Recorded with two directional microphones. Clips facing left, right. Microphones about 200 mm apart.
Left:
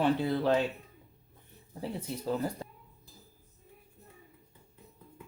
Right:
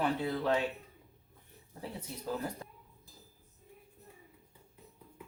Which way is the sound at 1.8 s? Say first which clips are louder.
Left 6 dB; 30° left (ahead or behind).